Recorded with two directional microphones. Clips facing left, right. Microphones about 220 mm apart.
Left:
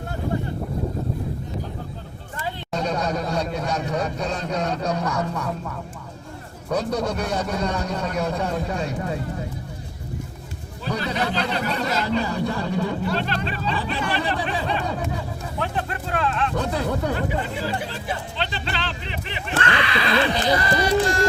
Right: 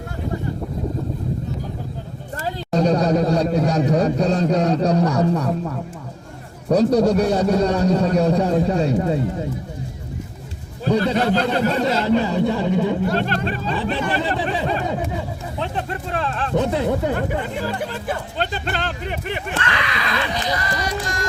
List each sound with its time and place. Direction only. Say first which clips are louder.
2.4 s a sound: right 7 dB; 40° right (ahead or behind)
6.7 s a man's voice: right 9 dB; 40° right (ahead or behind)
11.0 s speech: right 6 dB; 50° right (ahead or behind)
11.9 s speech: right 5 dB; 25° right (ahead or behind)
13.1 s speech: right 4 dB; 50° right (ahead or behind)
14.8 s speech: right 3 dB; 20° right (ahead or behind)
16.6 s speech: right 5 dB; 20° right (ahead or behind)
17.2 s speech: right 2 dB; 50° right (ahead or behind)
19.6 s speech: left 2 dB; 30° left (ahead or behind)